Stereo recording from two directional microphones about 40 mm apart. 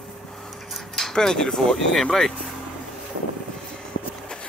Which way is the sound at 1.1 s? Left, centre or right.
Centre.